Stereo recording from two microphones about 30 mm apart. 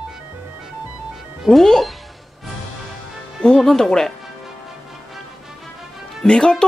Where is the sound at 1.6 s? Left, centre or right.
Centre.